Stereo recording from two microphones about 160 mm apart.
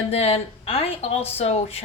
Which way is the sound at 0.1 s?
40° left (ahead or behind).